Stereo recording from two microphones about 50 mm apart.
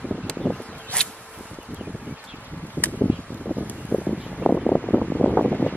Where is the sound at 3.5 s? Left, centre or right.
Left.